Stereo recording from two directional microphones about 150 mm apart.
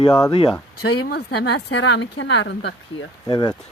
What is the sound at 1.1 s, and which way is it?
Speech, 90° left.